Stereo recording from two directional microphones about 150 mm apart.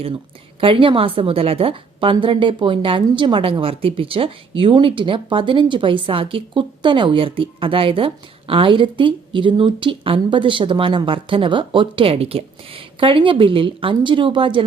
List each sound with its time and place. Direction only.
0.6 s a woman's voice: 35° right (ahead or behind)